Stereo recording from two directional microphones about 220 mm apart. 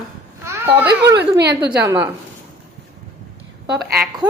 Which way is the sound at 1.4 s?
50° right (ahead or behind).